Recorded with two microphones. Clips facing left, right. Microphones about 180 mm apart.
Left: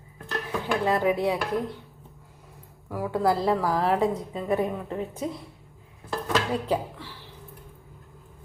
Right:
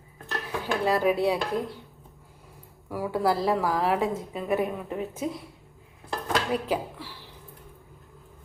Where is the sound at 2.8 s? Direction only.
5° right (ahead or behind).